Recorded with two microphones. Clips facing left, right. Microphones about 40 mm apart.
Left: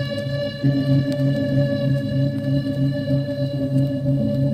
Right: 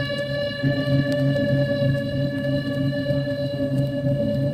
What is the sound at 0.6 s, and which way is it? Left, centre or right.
Music, centre.